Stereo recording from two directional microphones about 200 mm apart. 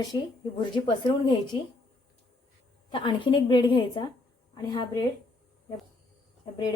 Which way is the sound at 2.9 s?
25° left (ahead or behind).